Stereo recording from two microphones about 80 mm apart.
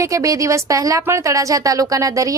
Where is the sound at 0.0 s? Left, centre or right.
Right.